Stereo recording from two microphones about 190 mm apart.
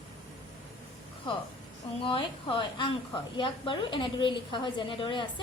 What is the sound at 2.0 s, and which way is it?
A woman's voice, 25° left (ahead or behind).